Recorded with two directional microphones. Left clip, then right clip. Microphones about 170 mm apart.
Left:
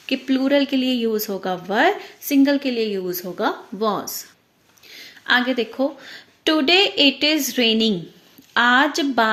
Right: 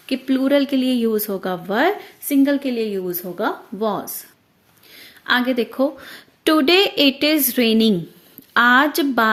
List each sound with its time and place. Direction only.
0.0 s speech: 30° right (ahead or behind)
4.9 s speech: 30° right (ahead or behind)